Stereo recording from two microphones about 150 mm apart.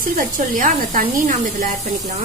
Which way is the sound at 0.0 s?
65° right (ahead or behind).